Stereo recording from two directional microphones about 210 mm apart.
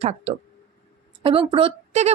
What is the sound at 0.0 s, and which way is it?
A woman's voice, 30° right (ahead or behind).